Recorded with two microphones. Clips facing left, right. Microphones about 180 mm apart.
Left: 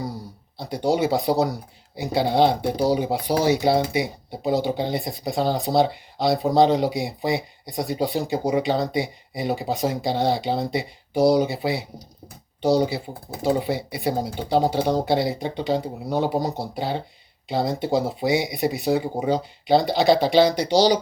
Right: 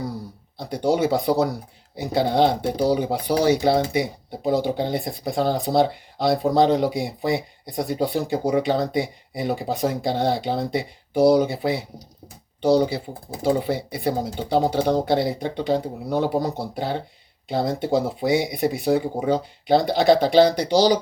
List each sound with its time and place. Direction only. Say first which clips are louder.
0.5 s speech: right 1 dB; 50° right (ahead or behind)